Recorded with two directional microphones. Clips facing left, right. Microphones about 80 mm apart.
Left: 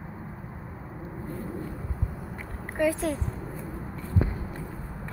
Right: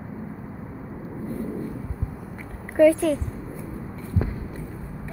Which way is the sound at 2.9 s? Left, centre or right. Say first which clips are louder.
Right 5 dB; left.